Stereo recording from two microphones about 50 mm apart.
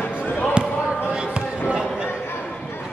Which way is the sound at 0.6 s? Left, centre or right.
Centre.